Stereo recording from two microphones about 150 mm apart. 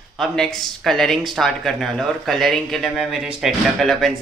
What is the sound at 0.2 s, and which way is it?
Speech, centre (ahead or behind).